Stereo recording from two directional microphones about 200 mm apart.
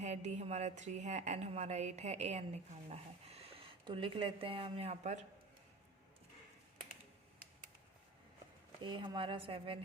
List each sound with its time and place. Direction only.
0.0 s a woman's voice: 35° right (ahead or behind)
8.8 s speech: 25° right (ahead or behind)